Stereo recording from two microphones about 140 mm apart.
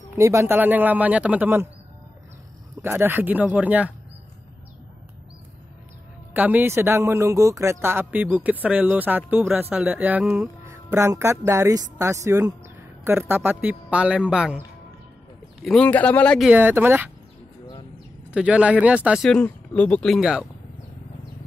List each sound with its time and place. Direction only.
0.1 s speech: 20° right (ahead or behind)
2.8 s speech: 15° right (ahead or behind)
6.3 s speech: 10° right (ahead or behind)
10.6 s speech: 20° right (ahead or behind)
15.6 s speech: 5° left (ahead or behind)
16.5 s speech: 15° right (ahead or behind)
18.3 s speech: 10° right (ahead or behind)
19.2 s speech: 5° left (ahead or behind)
20.2 s speech: 5° right (ahead or behind)